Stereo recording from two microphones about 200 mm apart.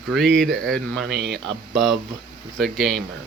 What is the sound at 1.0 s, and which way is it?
Speech, 60° right (ahead or behind).